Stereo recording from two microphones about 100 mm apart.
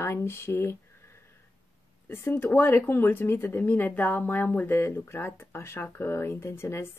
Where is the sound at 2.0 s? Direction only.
20° left (ahead or behind).